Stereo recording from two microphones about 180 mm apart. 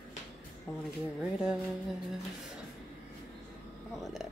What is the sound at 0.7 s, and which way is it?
Speech, centre (ahead or behind).